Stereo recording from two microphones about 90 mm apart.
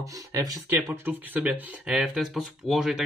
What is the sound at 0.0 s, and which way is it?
Speech, 40° right (ahead or behind).